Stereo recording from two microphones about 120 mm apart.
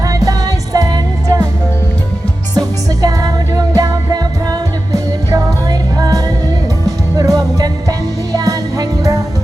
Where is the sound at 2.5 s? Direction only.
30° right (ahead or behind).